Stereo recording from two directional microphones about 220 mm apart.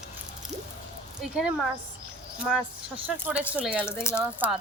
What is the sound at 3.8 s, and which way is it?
Speech, 10° left (ahead or behind).